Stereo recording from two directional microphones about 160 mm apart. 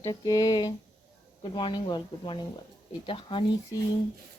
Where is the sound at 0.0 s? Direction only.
25° left (ahead or behind).